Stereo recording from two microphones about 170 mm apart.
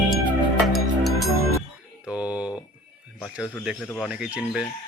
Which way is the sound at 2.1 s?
5° right (ahead or behind).